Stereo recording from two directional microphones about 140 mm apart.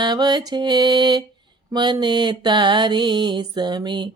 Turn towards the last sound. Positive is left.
turn(degrees=-35)  # may be behind; listen again after turning